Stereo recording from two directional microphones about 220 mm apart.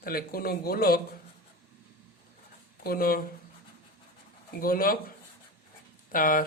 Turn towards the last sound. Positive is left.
turn(degrees=40)  # may be behind; listen again after turning